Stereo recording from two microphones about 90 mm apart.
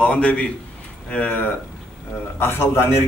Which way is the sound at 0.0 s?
15° left (ahead or behind).